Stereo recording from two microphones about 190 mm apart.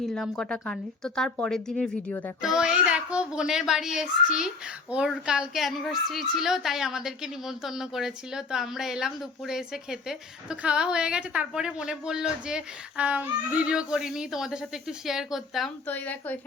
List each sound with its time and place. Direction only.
0.0 s a child's voice: 5° left (ahead or behind)